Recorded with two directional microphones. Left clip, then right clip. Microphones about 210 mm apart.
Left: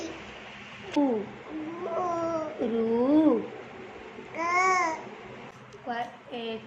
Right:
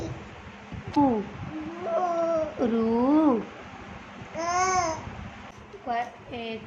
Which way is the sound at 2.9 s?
25° right (ahead or behind).